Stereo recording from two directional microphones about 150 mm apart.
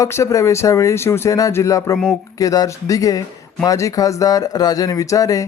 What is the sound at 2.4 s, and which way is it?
Speech, 25° left (ahead or behind).